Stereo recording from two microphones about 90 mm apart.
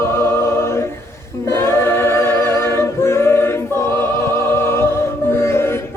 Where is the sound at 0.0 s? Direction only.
30° left (ahead or behind).